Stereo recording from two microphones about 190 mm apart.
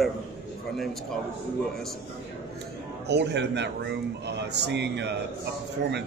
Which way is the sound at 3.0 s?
65° right (ahead or behind).